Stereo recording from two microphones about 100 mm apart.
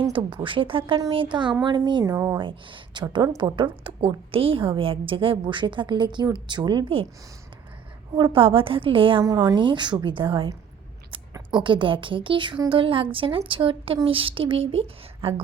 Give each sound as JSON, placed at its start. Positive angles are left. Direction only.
{"t": 0.1, "sound": "a woman's voice", "side_deg": -55}
{"t": 2.1, "sound": "speech", "side_deg": -25}
{"t": 2.4, "sound": "a woman's voice", "side_deg": -55}
{"t": 8.1, "sound": "a woman's voice", "side_deg": -55}
{"t": 9.2, "sound": "speech", "side_deg": -35}
{"t": 9.6, "sound": "a woman's voice", "side_deg": -50}
{"t": 11.6, "sound": "a woman's voice", "side_deg": -55}